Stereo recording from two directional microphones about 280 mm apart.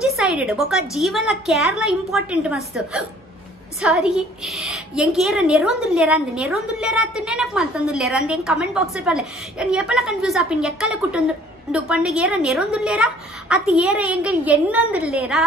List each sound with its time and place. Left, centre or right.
0.0 s a woman's voice: centre